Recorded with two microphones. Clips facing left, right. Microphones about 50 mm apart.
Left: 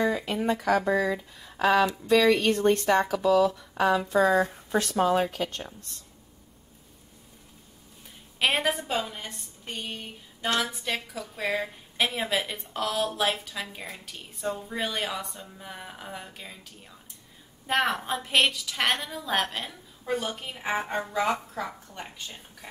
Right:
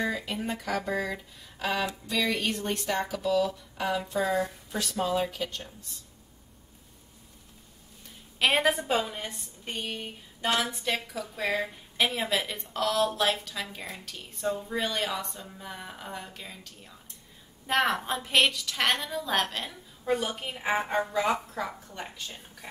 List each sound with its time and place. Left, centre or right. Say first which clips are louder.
0.0 s speech: left 5 dB; left
4.6 s speech: left 6 dB; left
8.4 s a woman's voice: right 1 dB; centre
9.7 s a sound: right 1 dB; centre
10.5 s a woman's voice: even; centre